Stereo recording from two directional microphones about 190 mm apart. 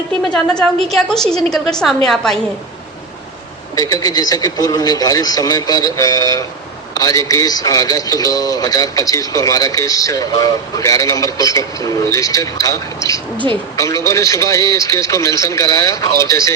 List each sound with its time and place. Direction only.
0.4 s a woman's voice: 5° left (ahead or behind)
3.8 s speech: 20° left (ahead or behind)